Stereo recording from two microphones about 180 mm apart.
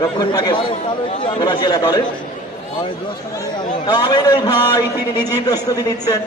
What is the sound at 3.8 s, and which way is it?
A man's voice, 25° left (ahead or behind).